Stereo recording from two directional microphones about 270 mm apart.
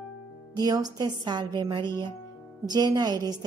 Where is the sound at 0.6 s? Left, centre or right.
Centre.